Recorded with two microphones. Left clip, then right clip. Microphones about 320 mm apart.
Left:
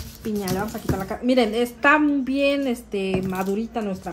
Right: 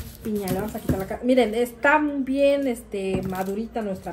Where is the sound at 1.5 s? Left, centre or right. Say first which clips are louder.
Left 1 dB; left.